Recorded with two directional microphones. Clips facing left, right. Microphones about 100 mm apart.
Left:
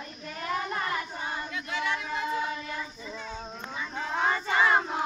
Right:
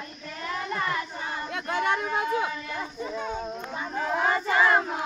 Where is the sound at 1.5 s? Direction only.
55° right (ahead or behind).